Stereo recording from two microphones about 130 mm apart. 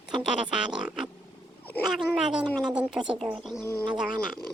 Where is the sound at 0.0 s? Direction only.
5° right (ahead or behind).